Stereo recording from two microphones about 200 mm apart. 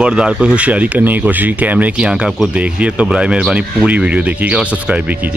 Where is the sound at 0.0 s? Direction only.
5° right (ahead or behind).